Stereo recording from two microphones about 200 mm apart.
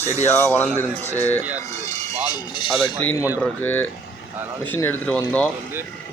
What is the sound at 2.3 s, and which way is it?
Speech, 25° left (ahead or behind).